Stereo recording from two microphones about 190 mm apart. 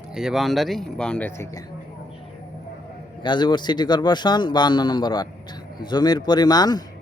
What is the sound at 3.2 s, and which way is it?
A man's voice, 25° left (ahead or behind).